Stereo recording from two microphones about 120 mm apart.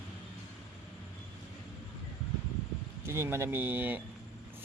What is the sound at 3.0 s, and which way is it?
Speech, 20° right (ahead or behind).